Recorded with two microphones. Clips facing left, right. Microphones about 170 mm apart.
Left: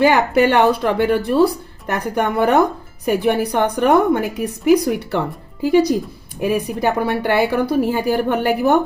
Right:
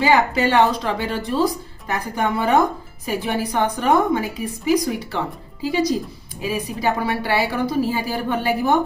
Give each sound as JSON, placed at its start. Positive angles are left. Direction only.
{"t": 0.0, "sound": "a woman's voice", "side_deg": 60}